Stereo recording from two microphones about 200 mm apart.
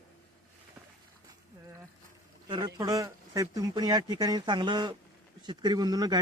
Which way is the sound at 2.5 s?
20° right (ahead or behind).